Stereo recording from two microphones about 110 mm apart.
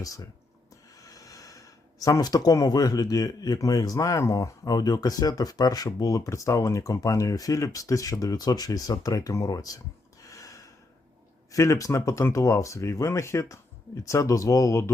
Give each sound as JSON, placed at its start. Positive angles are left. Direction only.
{"t": 0.0, "sound": "speech", "side_deg": 30}
{"t": 10.2, "sound": "gasp", "side_deg": 30}
{"t": 11.5, "sound": "speech", "side_deg": 30}